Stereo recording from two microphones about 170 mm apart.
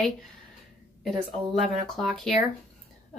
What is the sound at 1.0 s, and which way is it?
Speech, centre (ahead or behind).